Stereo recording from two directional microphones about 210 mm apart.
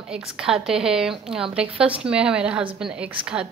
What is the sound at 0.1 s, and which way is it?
A woman's voice, 5° right (ahead or behind).